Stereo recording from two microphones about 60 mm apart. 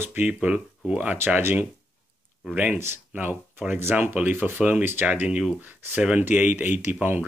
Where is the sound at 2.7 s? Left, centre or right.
Right.